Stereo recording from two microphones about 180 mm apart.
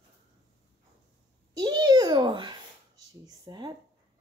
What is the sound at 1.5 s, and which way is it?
A child's voice, 25° right (ahead or behind).